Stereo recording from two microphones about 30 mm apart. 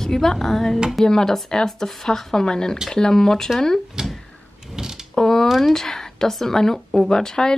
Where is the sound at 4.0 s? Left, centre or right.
Right.